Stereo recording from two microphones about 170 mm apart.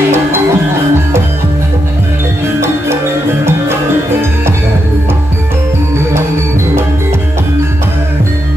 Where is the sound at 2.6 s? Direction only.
15° right (ahead or behind).